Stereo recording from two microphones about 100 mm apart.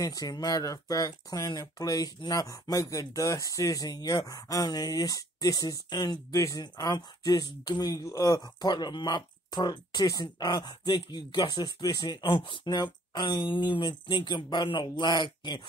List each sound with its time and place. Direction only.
0.0 s speech: 40° left (ahead or behind)
6.3 s speech: 30° left (ahead or behind)
6.6 s speech: 45° left (ahead or behind)